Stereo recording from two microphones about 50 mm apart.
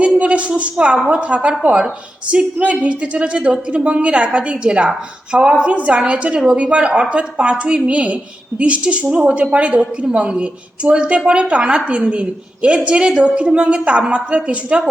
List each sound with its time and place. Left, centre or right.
0.0 s a woman's voice: right